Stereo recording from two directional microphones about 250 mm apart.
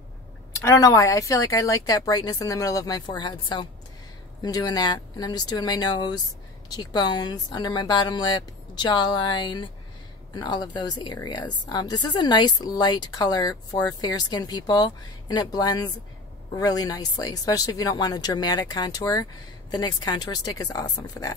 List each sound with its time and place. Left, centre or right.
0.7 s a woman's voice: centre